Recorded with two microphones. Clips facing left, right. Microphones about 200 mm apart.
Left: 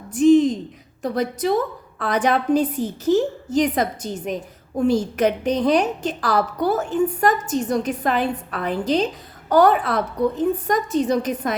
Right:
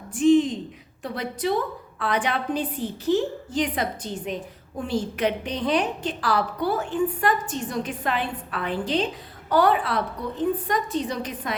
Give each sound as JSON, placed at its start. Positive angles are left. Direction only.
{"t": 0.1, "sound": "a woman's voice", "side_deg": 40}